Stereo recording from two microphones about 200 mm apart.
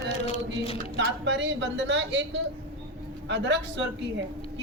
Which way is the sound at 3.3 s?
60° right (ahead or behind).